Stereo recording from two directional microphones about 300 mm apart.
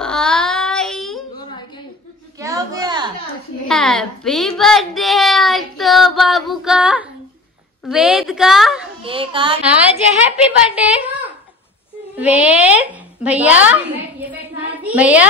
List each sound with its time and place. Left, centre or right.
0.0 s child singing: centre
2.3 s a sound: centre
3.6 s a child's voice: centre
9.0 s a child's voice: centre
9.7 s a woman's voice: centre